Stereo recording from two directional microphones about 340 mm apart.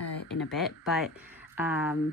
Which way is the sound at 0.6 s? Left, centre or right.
Centre.